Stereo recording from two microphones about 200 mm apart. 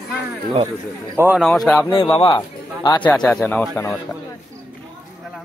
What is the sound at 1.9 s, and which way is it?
A man's voice, 20° left (ahead or behind).